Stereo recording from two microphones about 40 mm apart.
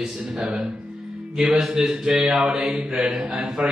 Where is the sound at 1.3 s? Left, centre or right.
Centre.